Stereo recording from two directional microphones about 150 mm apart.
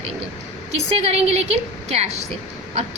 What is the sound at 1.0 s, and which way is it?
A woman's voice, 45° right (ahead or behind).